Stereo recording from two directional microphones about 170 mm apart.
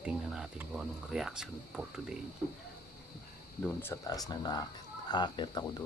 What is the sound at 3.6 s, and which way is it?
Speech, 15° left (ahead or behind).